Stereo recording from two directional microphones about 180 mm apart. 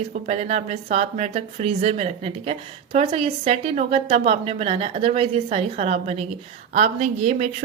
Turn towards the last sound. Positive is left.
turn(degrees=-40)  # may be behind; listen again after turning